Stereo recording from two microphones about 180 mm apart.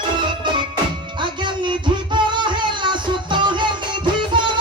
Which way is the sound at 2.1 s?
25° right (ahead or behind).